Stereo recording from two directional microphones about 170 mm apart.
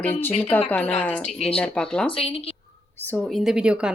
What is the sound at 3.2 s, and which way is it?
Speech, centre (ahead or behind).